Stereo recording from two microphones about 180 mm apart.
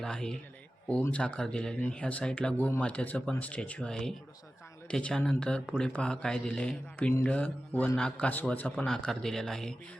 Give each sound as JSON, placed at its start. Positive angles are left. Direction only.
{"t": 0.0, "sound": "a man's voice", "side_deg": 5}